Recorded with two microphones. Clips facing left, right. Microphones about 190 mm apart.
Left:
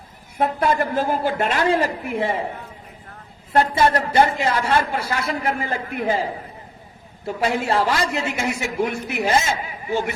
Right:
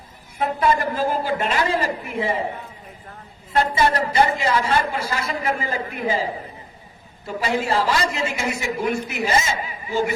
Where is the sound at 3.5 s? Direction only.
60° left (ahead or behind).